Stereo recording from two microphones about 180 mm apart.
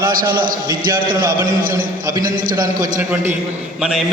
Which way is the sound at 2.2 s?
50° right (ahead or behind).